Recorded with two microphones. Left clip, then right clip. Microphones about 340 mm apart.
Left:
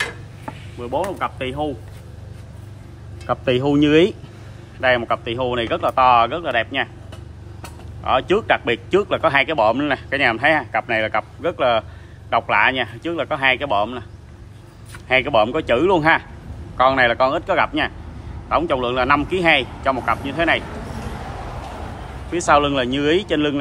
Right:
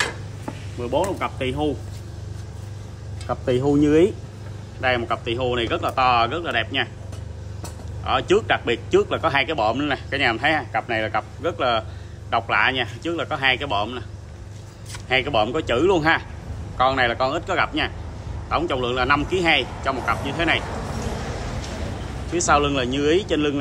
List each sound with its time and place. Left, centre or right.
0.7 s speech: centre
3.6 s a man's voice: left
8.0 s a man's voice: centre
15.0 s a man's voice: centre
22.3 s a man's voice: left